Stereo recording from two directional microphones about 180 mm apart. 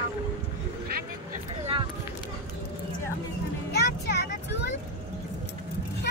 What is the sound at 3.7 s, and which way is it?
Speech, 70° left (ahead or behind).